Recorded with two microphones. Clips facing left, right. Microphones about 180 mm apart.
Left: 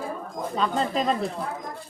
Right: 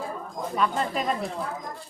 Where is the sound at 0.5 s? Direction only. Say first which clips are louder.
Left 1 dB; 30° left (ahead or behind).